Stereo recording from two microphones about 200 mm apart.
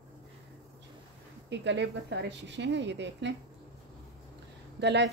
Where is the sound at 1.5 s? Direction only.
60° right (ahead or behind).